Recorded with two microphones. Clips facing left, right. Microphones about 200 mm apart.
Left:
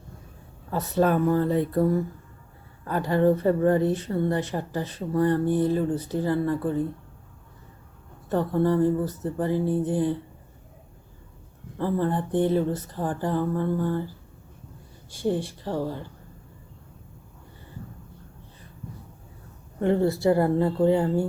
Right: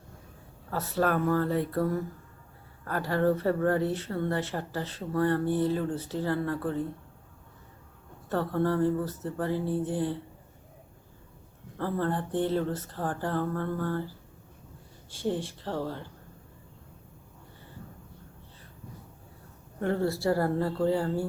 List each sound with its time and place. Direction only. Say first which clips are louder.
0.7 s speech: left 5 dB; 20° left (ahead or behind)
8.3 s speech: left 5 dB; 15° left (ahead or behind)
11.8 s speech: left 4 dB; 15° left (ahead or behind)
15.1 s speech: left 4 dB; 15° left (ahead or behind)
19.8 s speech: left 6 dB; 20° left (ahead or behind)